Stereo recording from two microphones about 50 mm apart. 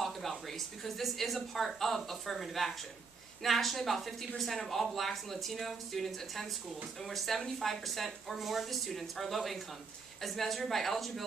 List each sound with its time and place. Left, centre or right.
0.0 s speech: centre